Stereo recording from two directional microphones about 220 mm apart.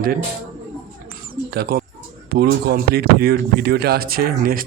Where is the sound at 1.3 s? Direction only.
45° right (ahead or behind).